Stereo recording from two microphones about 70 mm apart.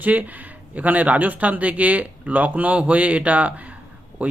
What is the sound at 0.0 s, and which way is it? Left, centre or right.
Speech, right.